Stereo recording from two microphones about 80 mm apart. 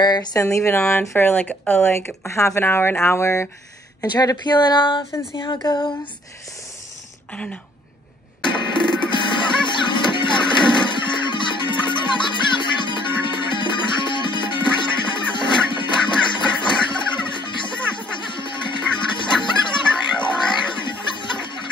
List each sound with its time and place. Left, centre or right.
0.0 s speech: left
0.4 s speech: left
4.1 s speech: left
5.7 s a sound: left
8.4 s music: left